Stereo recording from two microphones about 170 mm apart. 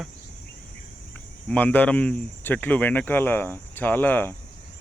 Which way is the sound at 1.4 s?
10° left (ahead or behind).